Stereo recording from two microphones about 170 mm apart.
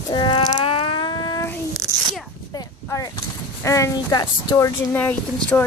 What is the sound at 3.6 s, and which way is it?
Speech, 20° left (ahead or behind).